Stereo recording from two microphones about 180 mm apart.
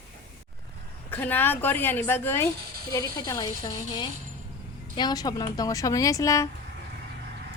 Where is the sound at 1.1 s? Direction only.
10° left (ahead or behind).